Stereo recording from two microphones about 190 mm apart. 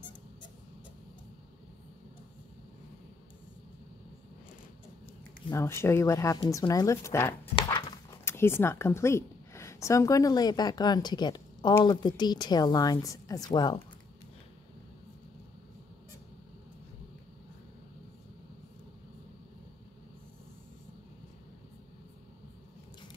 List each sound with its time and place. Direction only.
5.5 s speech: 15° left (ahead or behind)
7.5 s a sound: 25° left (ahead or behind)
8.3 s speech: 10° left (ahead or behind)